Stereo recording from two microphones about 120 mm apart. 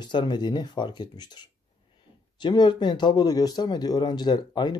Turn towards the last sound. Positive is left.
turn(degrees=40)  # may be behind; listen again after turning